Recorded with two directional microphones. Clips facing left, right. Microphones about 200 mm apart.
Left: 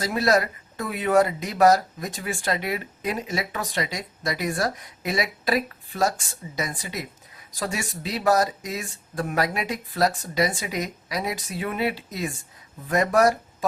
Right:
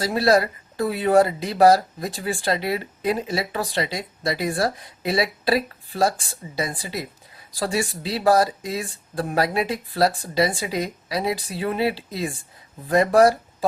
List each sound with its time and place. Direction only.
0.0 s speech: 30° right (ahead or behind)